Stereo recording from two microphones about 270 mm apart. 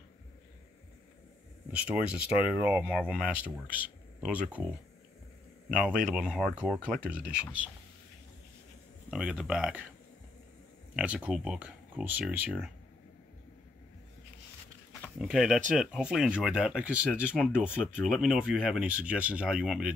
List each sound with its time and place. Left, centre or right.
1.7 s speech: centre
6.0 s speech: centre
9.1 s speech: centre
11.0 s speech: centre
15.1 s speech: centre